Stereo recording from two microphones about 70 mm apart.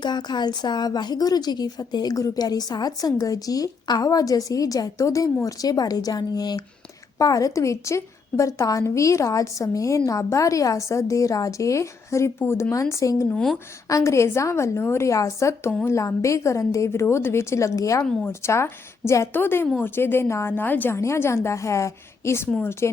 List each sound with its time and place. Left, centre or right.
0.0 s a woman's voice: left
20.9 s a woman's voice: left